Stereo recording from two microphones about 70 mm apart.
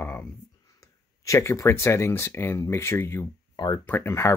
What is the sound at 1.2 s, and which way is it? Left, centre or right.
Speech, left.